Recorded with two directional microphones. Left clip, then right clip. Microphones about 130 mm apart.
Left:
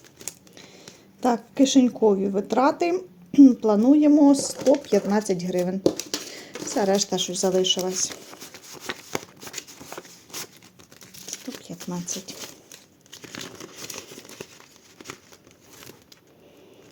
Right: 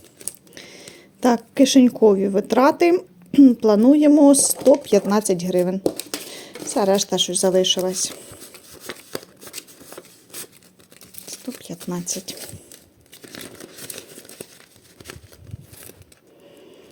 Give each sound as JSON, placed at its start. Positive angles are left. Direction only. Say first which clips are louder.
{"t": 0.5, "sound": "speech", "louder": "right 5 dB", "side_deg": -50}
{"t": 5.8, "sound": "a sound", "louder": "left 1 dB", "side_deg": -20}
{"t": 6.7, "sound": "speech", "louder": "right 4 dB", "side_deg": -30}
{"t": 8.7, "sound": "a sound", "louder": "left 2 dB", "side_deg": 5}
{"t": 11.6, "sound": "shuffling cards", "louder": "right 4 dB", "side_deg": -45}
{"t": 13.9, "sound": "crumpling", "louder": "even", "side_deg": -5}